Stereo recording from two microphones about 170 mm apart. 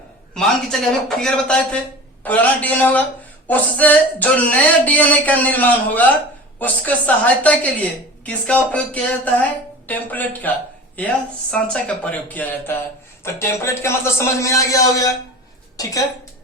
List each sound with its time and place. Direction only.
0.3 s a woman's voice: 5° left (ahead or behind)
11.5 s a woman's voice: 5° left (ahead or behind)